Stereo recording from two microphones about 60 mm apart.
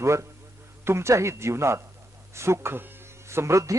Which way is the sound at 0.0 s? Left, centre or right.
Right.